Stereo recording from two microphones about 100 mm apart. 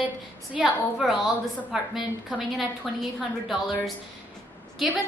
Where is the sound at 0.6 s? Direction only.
5° right (ahead or behind).